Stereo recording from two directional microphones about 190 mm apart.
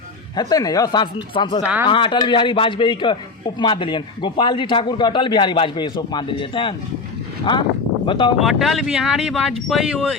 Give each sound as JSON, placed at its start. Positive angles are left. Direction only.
{"t": 0.3, "sound": "a man's voice", "side_deg": 20}
{"t": 1.6, "sound": "speech", "side_deg": -5}
{"t": 1.9, "sound": "a man's voice", "side_deg": 25}
{"t": 8.0, "sound": "a man's voice", "side_deg": 25}
{"t": 8.4, "sound": "speech", "side_deg": 0}